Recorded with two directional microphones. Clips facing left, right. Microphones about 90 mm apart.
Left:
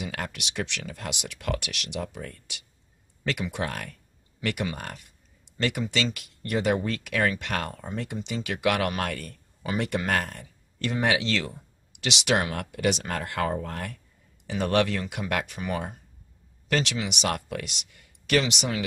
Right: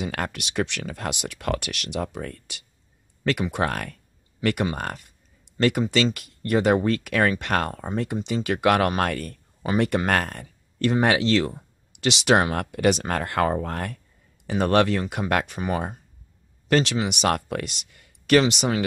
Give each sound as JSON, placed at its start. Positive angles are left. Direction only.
{"t": 0.0, "sound": "speech", "side_deg": -50}